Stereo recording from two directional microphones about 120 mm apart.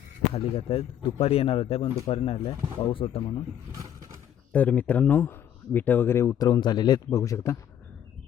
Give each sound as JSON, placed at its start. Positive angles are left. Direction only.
{"t": 0.2, "sound": "speech", "side_deg": 55}
{"t": 3.7, "sound": "vehicle", "side_deg": -30}
{"t": 4.5, "sound": "speech", "side_deg": 15}